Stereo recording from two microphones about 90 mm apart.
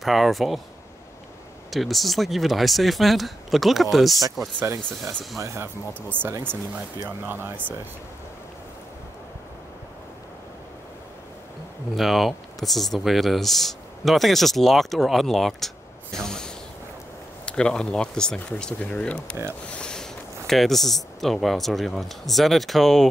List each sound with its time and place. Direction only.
0.0 s speech: centre (ahead or behind)
1.7 s speech: centre (ahead or behind)
5.4 s speech: 30° right (ahead or behind)
12.0 s speech: centre (ahead or behind)